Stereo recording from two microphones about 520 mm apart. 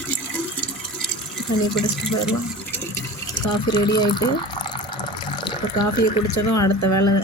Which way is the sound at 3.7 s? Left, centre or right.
Centre.